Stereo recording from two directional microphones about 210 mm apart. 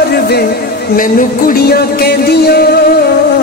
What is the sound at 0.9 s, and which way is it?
Music, 45° left (ahead or behind).